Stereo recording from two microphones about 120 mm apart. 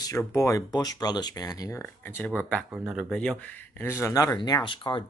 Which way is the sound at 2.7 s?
10° right (ahead or behind).